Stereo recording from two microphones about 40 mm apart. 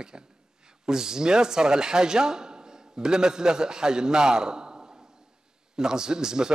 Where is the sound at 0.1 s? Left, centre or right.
Right.